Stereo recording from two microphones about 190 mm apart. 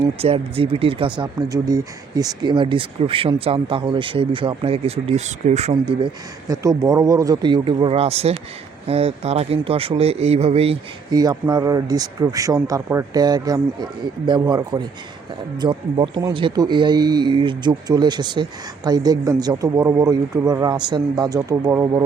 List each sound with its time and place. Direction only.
0.2 s a man's voice: 30° right (ahead or behind)
11.1 s speech: 20° right (ahead or behind)